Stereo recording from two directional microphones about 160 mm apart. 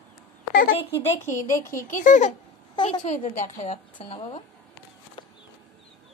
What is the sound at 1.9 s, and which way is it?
A woman's voice, 55° left (ahead or behind).